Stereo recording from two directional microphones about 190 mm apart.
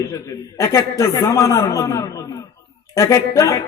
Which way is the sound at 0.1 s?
15° left (ahead or behind).